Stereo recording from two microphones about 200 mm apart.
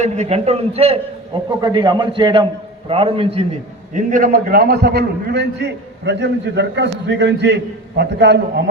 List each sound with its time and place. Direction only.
0.0 s a man's voice: 35° right (ahead or behind)
3.9 s a man's voice: 45° right (ahead or behind); by 8.6 s 60° right (ahead or behind)